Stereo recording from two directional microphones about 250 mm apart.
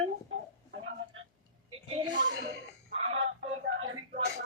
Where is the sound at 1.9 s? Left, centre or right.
Centre.